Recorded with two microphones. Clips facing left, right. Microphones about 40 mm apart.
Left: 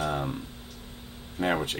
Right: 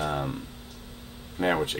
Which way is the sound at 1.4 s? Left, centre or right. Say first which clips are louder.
Right 2 dB; centre.